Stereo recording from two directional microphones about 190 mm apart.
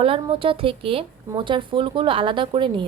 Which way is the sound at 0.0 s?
30° right (ahead or behind).